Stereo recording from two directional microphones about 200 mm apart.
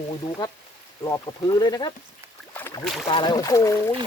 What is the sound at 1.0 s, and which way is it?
Speech, 20° left (ahead or behind).